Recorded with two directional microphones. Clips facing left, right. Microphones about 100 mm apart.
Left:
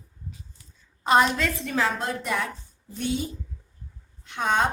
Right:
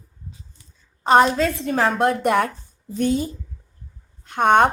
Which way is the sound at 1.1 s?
35° right (ahead or behind).